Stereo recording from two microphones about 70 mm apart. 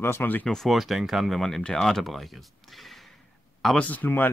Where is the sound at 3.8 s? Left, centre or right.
Left.